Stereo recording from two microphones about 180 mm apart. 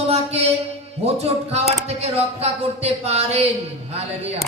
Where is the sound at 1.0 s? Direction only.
35° right (ahead or behind).